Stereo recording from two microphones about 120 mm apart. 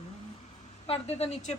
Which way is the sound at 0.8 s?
55° left (ahead or behind).